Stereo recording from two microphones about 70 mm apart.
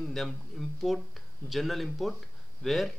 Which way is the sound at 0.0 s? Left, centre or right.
Centre.